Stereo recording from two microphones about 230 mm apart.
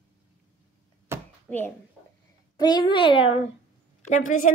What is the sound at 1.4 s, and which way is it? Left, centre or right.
Speech, centre.